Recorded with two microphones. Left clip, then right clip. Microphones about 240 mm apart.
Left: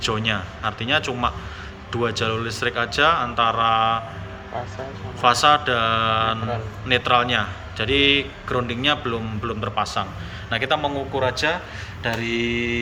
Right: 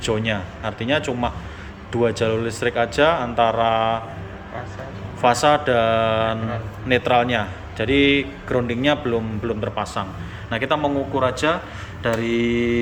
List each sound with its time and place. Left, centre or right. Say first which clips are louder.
0.0 s a man's voice: even; centre
5.2 s a man's voice: even; centre
12.0 s mantra: right 3 dB; centre